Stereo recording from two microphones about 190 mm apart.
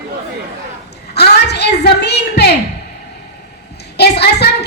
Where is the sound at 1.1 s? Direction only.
60° left (ahead or behind).